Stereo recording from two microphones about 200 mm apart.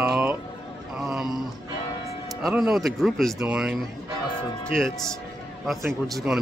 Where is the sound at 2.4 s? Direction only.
5° right (ahead or behind).